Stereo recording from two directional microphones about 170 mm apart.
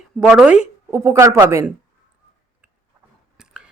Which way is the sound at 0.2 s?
5° right (ahead or behind).